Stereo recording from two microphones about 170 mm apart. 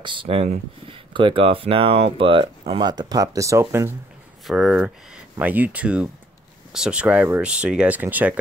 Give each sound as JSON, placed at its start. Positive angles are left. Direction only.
{"t": 0.0, "sound": "speech", "side_deg": -30}
{"t": 4.5, "sound": "speech", "side_deg": 0}